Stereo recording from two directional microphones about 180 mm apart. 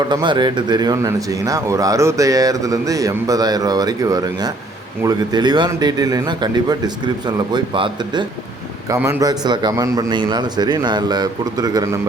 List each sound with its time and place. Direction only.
0.0 s speech: 25° right (ahead or behind)